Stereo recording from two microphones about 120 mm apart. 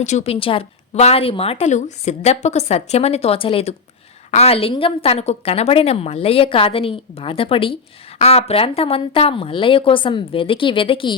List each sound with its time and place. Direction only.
0.0 s a woman's voice: 75° left (ahead or behind)
0.3 s a woman's voice: 50° left (ahead or behind)
1.6 s a woman's voice: 75° left (ahead or behind); by 7.8 s 50° left (ahead or behind)
8.2 s a woman's voice: 60° left (ahead or behind)